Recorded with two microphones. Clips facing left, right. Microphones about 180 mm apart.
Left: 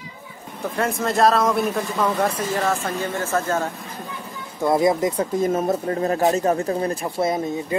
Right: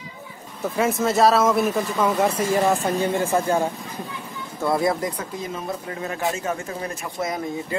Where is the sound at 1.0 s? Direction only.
Centre (ahead or behind).